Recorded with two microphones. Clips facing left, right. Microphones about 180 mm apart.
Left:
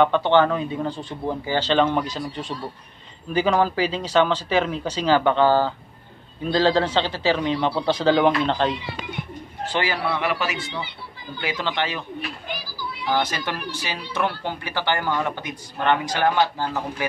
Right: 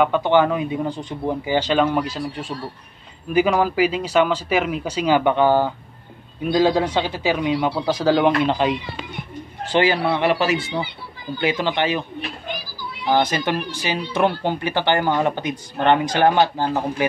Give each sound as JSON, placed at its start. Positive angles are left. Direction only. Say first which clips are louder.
{"t": 0.0, "sound": "speech", "louder": "right 1 dB", "side_deg": -10}
{"t": 9.7, "sound": "speech", "louder": "right 6 dB", "side_deg": -20}
{"t": 11.4, "sound": "speech", "louder": "right 5 dB", "side_deg": -15}